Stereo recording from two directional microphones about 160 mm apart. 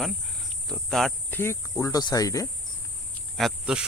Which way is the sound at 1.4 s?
15° left (ahead or behind).